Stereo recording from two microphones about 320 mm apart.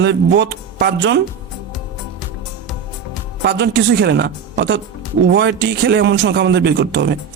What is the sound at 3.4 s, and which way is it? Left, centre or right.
Speech, right.